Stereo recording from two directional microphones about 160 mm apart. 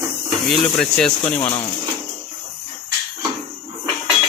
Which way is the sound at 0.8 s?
5° left (ahead or behind).